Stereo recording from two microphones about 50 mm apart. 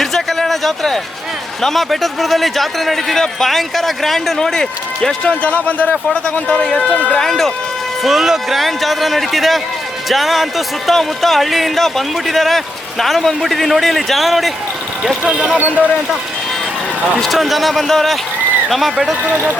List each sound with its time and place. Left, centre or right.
0.0 s a sound: centre
1.6 s speech: centre
5.4 s speech: left
6.3 s speech: centre
6.9 s speech: left
7.2 s speech: centre
8.0 s speech: centre
15.0 s speech: centre
15.5 s speech: right
17.2 s speech: centre
19.2 s speech: right